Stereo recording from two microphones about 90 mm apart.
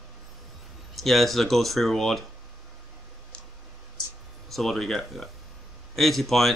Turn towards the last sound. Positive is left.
turn(degrees=0)  # may be behind; listen again after turning